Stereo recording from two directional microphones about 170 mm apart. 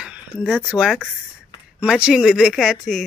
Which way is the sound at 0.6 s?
5° right (ahead or behind).